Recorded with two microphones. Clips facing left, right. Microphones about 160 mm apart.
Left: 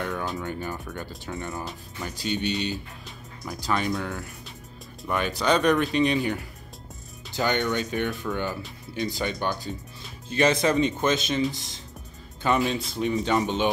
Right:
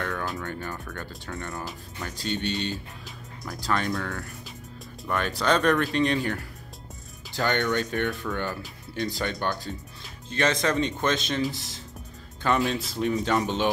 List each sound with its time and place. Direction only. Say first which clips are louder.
0.0 s music: left 1 dB; centre (ahead or behind)
0.4 s speech: left 2 dB; 10° left (ahead or behind)
1.4 s speech: left 1 dB; centre (ahead or behind)